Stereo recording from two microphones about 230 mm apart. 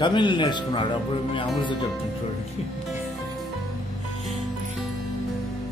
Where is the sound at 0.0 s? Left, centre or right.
Centre.